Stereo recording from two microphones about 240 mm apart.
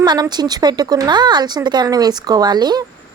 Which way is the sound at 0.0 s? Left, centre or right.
Centre.